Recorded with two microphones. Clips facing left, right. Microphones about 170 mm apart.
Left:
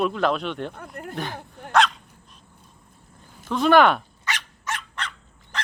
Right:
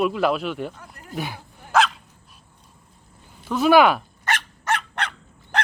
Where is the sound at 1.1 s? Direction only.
10° right (ahead or behind).